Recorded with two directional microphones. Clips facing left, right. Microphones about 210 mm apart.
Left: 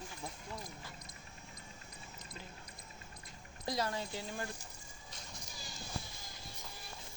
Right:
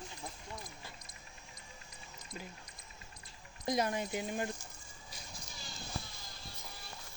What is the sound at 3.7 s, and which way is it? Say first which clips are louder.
Speech: right 4 dB; 20° right (ahead or behind).